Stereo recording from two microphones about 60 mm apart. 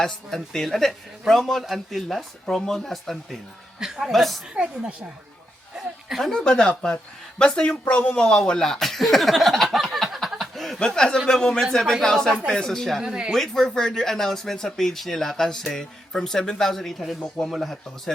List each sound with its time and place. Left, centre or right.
0.0 s speech: centre
3.8 s speech: centre
4.1 s speech: centre
4.5 s speech: centre
5.7 s a woman's voice: centre
10.4 s chuckle: centre
10.8 s speech: centre
13.0 s speech: centre
13.3 s speech: centre